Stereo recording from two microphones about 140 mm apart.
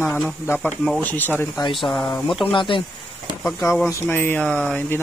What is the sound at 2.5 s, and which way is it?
Speech, 35° left (ahead or behind).